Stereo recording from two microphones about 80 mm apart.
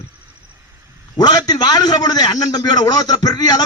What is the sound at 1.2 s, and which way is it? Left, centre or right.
A man's voice, left.